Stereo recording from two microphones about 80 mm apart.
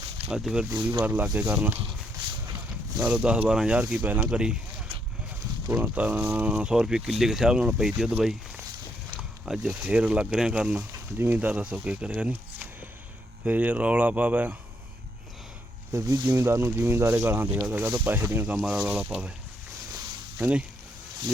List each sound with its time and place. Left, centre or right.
0.3 s speech: centre
0.9 s speech: right
3.0 s speech: centre
5.8 s speech: centre
9.5 s speech: centre
13.4 s speech: centre
15.9 s speech: right
18.4 s speech: centre
20.4 s speech: centre